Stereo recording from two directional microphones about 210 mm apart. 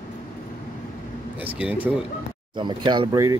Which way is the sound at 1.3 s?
5° right (ahead or behind).